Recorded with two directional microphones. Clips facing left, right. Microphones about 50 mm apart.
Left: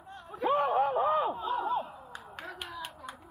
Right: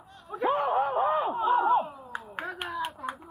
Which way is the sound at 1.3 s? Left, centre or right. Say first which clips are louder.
Right 8 dB; right.